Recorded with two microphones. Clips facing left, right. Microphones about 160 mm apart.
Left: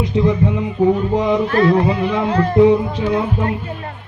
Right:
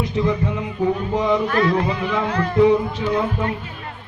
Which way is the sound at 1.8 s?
20° left (ahead or behind).